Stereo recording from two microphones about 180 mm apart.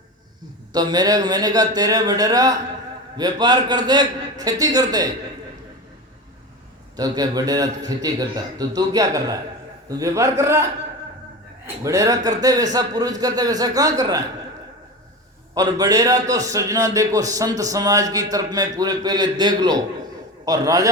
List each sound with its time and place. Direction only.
0.7 s a man's voice: 20° right (ahead or behind)
6.9 s a man's voice: 20° right (ahead or behind)
15.5 s a man's voice: 20° right (ahead or behind)